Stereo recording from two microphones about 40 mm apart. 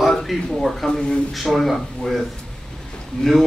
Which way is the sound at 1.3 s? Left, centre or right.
Centre.